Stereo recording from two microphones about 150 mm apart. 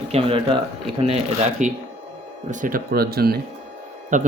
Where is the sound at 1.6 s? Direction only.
55° right (ahead or behind).